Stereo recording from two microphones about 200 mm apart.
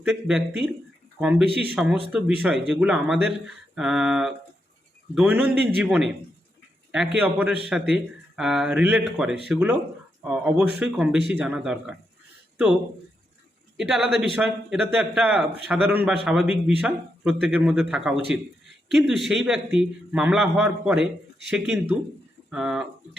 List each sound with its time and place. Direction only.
0.0 s a man's voice: centre (ahead or behind)
13.7 s a man's voice: centre (ahead or behind)